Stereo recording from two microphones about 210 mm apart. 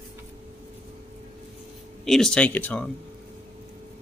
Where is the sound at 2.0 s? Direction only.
Centre (ahead or behind).